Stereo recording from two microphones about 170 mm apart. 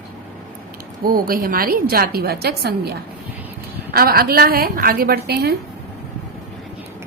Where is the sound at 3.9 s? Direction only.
60° right (ahead or behind).